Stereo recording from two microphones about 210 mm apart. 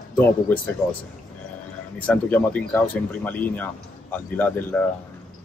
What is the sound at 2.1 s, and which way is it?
Speech, 10° left (ahead or behind).